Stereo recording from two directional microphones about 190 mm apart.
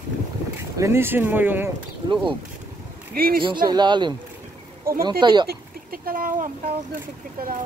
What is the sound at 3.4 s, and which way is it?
Speech, 25° right (ahead or behind).